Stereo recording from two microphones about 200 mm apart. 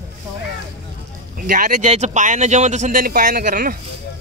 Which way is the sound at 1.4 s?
40° right (ahead or behind).